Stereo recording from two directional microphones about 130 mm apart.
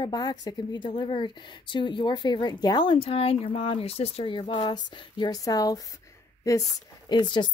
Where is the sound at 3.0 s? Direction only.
50° left (ahead or behind); by 6.6 s 25° left (ahead or behind).